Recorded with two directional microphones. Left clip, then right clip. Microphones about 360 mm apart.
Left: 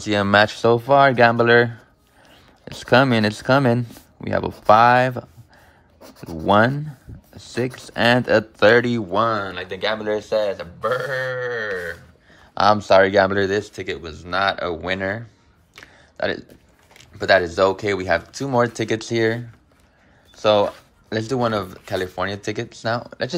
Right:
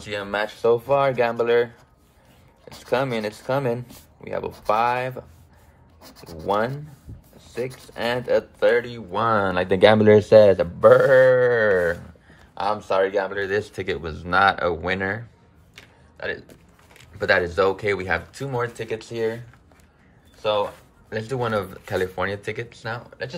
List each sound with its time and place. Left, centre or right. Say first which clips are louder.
0.0 s speech: left 10 dB; centre
2.8 s speech: left 7 dB; left
6.4 s speech: left 7 dB; left
9.1 s speech: right 1 dB; centre
12.5 s speech: left 8 dB; left; by 15.2 s centre
15.7 s a sound: left 4 dB; centre
17.0 s speech: left 4 dB; centre
20.3 s speech: left 6 dB; centre